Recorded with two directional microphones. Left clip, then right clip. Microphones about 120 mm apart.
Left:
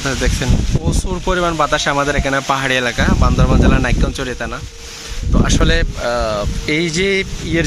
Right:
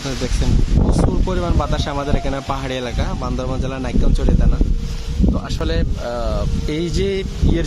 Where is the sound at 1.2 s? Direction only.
Centre (ahead or behind).